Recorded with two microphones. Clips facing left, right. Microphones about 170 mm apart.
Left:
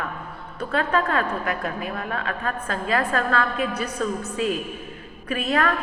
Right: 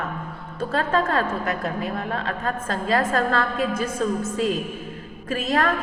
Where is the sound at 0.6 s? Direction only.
40° right (ahead or behind).